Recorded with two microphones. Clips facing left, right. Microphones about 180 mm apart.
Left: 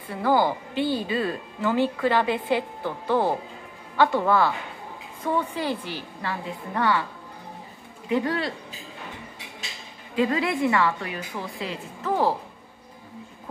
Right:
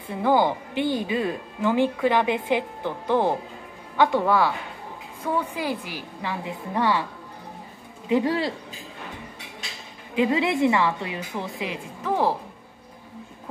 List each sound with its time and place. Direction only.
0.1 s speech: 20° right (ahead or behind)
8.1 s a woman's voice: 25° right (ahead or behind)
10.1 s a woman's voice: 20° right (ahead or behind)